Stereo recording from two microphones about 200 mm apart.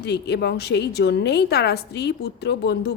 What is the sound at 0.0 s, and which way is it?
A woman's voice, 55° left (ahead or behind).